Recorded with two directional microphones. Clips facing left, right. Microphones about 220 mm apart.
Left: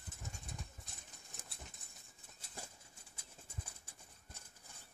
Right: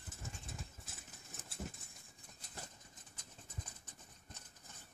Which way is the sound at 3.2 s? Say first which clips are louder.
Even; 10° left (ahead or behind).